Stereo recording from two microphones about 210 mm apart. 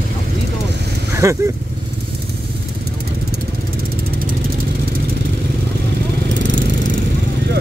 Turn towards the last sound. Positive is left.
turn(degrees=-60)  # may be behind; listen again after turning